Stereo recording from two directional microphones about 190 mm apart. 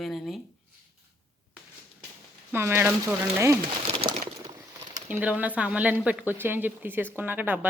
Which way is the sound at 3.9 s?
30° right (ahead or behind).